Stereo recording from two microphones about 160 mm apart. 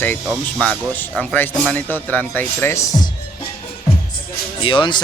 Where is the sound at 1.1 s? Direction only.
5° left (ahead or behind).